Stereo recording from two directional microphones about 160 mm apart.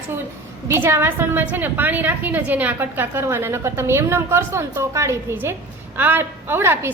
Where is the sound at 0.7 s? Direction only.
15° right (ahead or behind).